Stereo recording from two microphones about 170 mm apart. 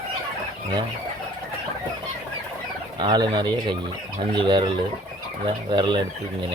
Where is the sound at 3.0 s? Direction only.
25° right (ahead or behind).